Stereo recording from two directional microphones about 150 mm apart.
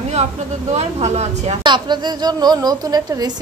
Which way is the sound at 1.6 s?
30° right (ahead or behind).